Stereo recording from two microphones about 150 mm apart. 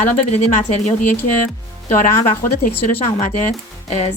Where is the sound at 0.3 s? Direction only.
50° left (ahead or behind).